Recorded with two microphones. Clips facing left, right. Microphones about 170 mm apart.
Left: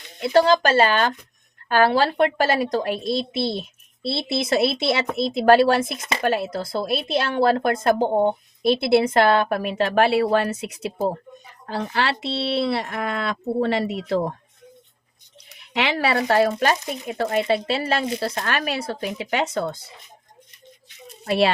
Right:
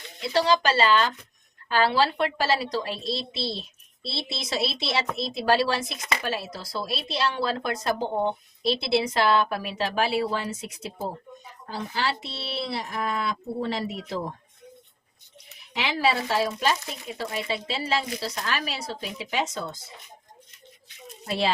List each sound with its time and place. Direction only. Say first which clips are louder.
0.2 s speech: left 6 dB; 50° left (ahead or behind); by 14.3 s 65° left (ahead or behind)
15.7 s speech: left 3 dB; 65° left (ahead or behind)
21.2 s a child's voice: left 7 dB; 65° left (ahead or behind)